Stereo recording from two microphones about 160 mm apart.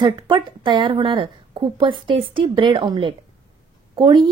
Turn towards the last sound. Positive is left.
turn(degrees=-30)  # may be behind; listen again after turning